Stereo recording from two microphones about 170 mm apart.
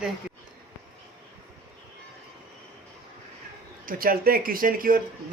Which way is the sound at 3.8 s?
60° right (ahead or behind).